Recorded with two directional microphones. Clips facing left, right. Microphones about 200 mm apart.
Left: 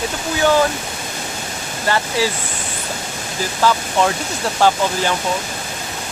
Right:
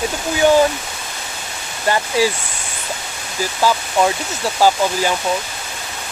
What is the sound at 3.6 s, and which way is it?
Speech, 10° right (ahead or behind).